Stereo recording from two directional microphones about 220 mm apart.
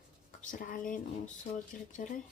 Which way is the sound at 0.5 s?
40° left (ahead or behind).